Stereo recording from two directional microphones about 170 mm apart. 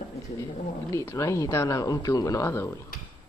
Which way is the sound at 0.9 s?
15° left (ahead or behind).